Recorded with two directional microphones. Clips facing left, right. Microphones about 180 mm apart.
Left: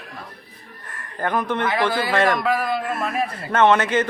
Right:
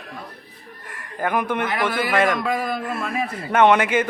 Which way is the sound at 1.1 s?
10° right (ahead or behind).